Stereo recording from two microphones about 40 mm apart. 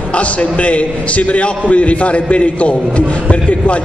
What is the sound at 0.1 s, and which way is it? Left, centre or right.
A man's voice, left.